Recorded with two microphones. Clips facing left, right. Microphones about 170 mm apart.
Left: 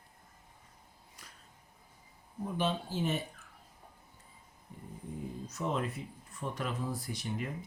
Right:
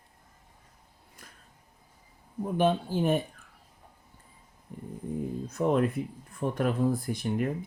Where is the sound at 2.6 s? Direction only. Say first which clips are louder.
Right 8 dB; 55° right (ahead or behind).